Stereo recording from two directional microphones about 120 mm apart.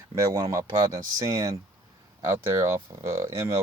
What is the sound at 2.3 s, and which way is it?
Speech, 25° right (ahead or behind).